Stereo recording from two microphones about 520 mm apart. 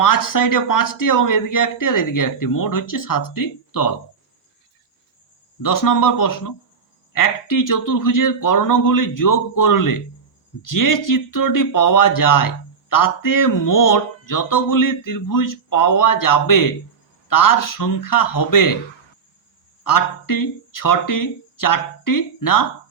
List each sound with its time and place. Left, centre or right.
0.0 s speech: left
5.6 s speech: left
19.8 s speech: left